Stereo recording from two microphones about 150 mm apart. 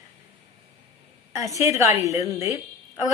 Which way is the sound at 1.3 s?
20° right (ahead or behind).